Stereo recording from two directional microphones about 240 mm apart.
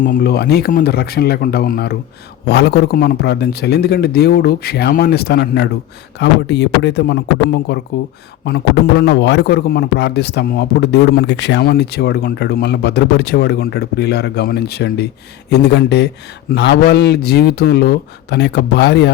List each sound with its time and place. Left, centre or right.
0.0 s a man's voice: left